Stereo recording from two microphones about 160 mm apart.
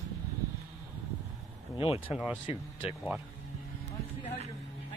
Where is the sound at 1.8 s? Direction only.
35° left (ahead or behind).